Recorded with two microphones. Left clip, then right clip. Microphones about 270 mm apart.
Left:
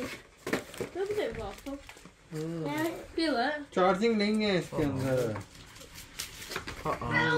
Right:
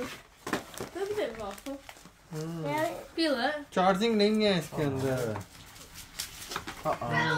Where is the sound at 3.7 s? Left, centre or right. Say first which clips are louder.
Even; right.